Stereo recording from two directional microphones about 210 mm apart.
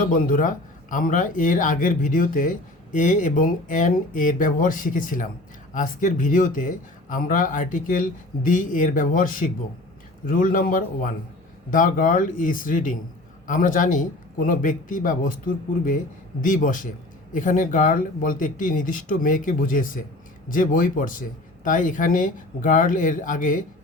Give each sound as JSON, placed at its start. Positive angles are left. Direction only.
{"t": 0.0, "sound": "a man's voice", "side_deg": 40}